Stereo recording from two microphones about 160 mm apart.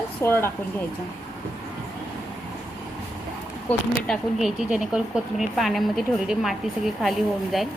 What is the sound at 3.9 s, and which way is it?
Speech, centre (ahead or behind).